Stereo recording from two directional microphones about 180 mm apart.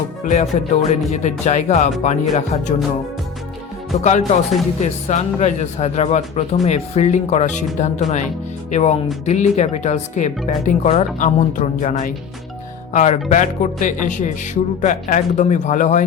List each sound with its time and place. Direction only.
0.3 s speech: 40° left (ahead or behind)
3.9 s speech: 35° left (ahead or behind)